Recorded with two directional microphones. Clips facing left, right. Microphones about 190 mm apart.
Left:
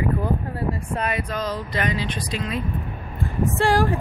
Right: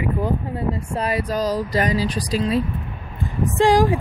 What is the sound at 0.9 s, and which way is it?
Speech, 35° right (ahead or behind).